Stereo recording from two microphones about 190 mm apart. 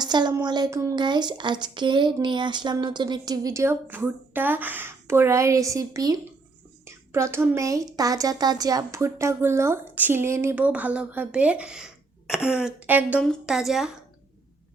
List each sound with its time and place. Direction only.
0.0 s a woman's voice: 20° right (ahead or behind); by 13.9 s centre (ahead or behind)